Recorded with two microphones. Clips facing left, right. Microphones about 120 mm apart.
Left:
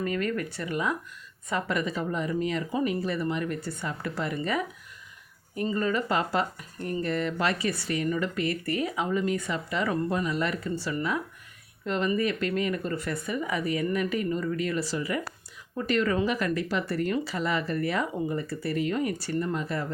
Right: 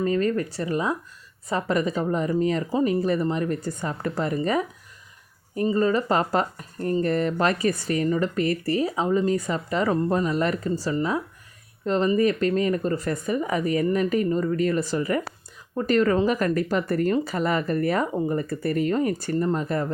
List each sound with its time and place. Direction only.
0.0 s speech: 30° right (ahead or behind)
5.7 s speech: 35° right (ahead or behind)